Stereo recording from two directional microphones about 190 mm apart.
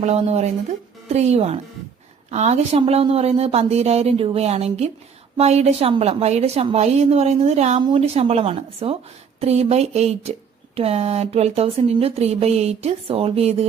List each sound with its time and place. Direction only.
0.0 s speech: 35° right (ahead or behind)